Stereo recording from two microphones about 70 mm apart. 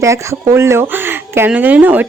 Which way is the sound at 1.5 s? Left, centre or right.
Right.